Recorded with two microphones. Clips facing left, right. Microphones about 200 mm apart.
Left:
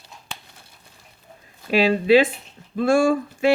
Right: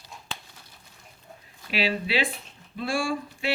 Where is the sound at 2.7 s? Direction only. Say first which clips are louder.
Left 10 dB; 50° left (ahead or behind).